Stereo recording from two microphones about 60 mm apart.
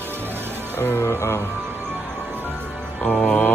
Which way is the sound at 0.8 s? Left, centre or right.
Left.